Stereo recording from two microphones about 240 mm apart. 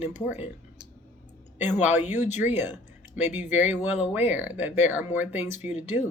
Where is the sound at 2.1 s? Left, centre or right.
Left.